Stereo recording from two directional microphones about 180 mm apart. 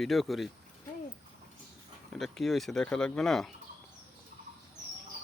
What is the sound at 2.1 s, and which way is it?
Speech, centre (ahead or behind).